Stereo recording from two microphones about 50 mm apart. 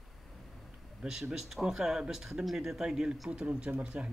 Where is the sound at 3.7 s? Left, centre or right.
Right.